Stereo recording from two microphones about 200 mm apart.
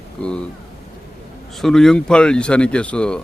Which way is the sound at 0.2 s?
5° left (ahead or behind).